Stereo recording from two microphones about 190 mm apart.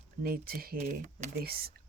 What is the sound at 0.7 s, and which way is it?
Speech, 40° right (ahead or behind).